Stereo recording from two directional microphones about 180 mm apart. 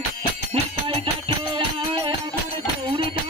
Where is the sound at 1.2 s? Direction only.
30° right (ahead or behind).